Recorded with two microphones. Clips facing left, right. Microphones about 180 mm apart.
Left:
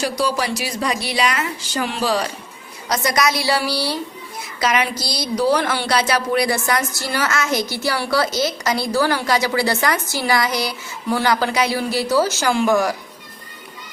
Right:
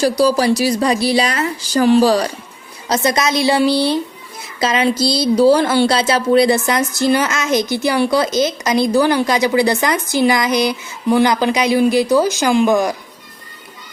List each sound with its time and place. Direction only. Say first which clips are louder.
0.0 s speech: right 7 dB; 35° right (ahead or behind)
2.9 s a woman's voice: right 3 dB; 25° right (ahead or behind)